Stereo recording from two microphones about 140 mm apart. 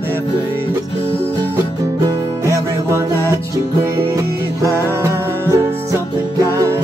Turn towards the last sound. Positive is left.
turn(degrees=-20)  # may be behind; listen again after turning